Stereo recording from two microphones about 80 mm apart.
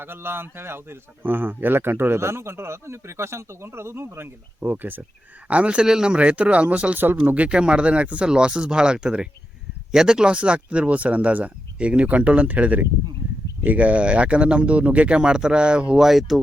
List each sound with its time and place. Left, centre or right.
0.0 s a man's voice: right; by 16.4 s centre